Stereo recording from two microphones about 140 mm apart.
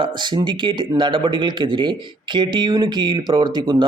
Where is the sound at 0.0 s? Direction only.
35° right (ahead or behind).